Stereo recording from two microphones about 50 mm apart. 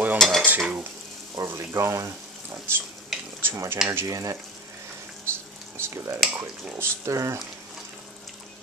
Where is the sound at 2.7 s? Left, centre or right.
Right.